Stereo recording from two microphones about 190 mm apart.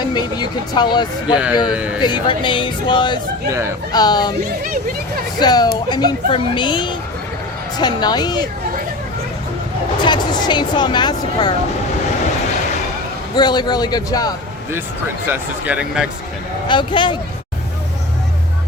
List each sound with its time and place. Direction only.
0.1 s speech: 20° left (ahead or behind)
1.6 s speech: 5° right (ahead or behind)
2.0 s speech: 25° left (ahead or behind)
5.4 s speech: 20° left (ahead or behind)
10.0 s speech: 25° left (ahead or behind)
13.3 s speech: 20° left (ahead or behind)
15.3 s speech: 10° right (ahead or behind)
16.6 s speech: 25° left (ahead or behind)